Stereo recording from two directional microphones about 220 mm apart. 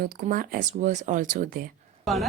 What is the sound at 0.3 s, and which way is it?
Speech, 40° right (ahead or behind).